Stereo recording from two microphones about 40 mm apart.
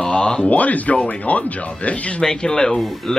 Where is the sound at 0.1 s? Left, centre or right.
Left.